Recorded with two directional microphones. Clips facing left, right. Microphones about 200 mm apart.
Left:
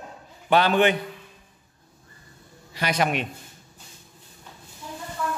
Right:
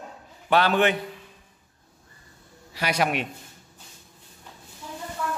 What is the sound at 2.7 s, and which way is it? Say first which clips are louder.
Speech: left 1 dB; 5° right (ahead or behind).